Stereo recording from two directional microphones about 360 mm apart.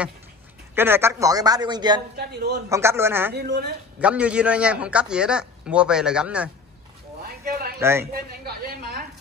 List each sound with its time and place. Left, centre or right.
0.7 s speech: centre
2.1 s a woman's voice: right
2.7 s speech: centre
3.3 s a woman's voice: right
4.0 s a man's voice: centre
7.2 s a sound: right
7.8 s speech: centre
8.1 s a woman's voice: right